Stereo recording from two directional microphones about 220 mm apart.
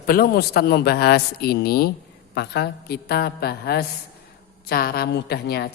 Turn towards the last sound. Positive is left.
turn(degrees=45)  # may be behind; listen again after turning